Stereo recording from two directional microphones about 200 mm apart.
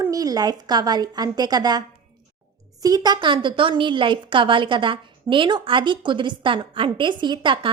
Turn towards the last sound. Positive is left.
turn(degrees=-25)  # may be behind; listen again after turning